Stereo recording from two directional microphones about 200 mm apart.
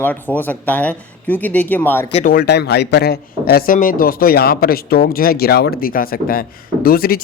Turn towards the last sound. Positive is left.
turn(degrees=50)  # may be behind; listen again after turning